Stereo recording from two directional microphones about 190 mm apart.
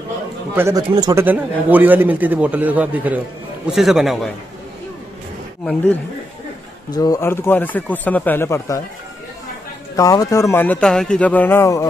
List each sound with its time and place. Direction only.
0.6 s a man's voice: 15° right (ahead or behind)
1.2 s a man's voice: 10° right (ahead or behind)
6.9 s speech: 20° left (ahead or behind)
9.9 s speech: 20° left (ahead or behind)